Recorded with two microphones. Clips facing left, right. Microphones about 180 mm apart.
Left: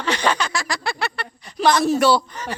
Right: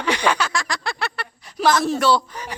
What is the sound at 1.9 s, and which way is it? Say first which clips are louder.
Speech: left 2 dB; 10° left (ahead or behind).